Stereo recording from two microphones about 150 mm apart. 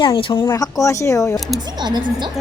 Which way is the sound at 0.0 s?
35° left (ahead or behind).